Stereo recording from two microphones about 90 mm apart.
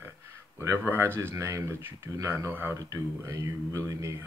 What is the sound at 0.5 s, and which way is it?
Speech, 30° right (ahead or behind).